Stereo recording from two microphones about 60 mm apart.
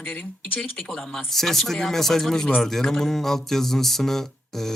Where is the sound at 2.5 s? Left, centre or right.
Centre.